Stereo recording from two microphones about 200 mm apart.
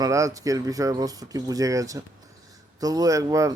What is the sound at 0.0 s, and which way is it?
Speech, 15° right (ahead or behind).